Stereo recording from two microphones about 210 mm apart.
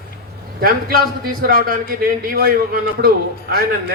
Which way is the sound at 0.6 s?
45° right (ahead or behind).